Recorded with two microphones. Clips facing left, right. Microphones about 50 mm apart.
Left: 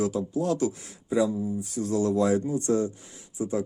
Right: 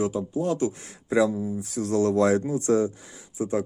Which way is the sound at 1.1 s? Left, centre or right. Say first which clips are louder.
Right 2 dB; right.